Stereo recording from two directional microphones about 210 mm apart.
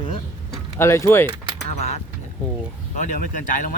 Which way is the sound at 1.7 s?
30° left (ahead or behind).